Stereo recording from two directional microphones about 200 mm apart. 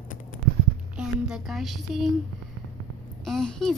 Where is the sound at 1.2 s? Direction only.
Centre (ahead or behind).